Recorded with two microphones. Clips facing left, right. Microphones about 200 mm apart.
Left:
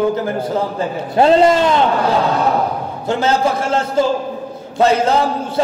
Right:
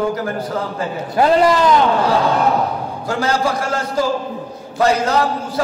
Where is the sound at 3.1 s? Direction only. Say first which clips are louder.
Left 3 dB; 25° left (ahead or behind).